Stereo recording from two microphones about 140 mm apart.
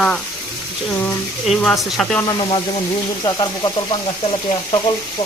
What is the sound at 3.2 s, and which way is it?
Speech, 30° left (ahead or behind).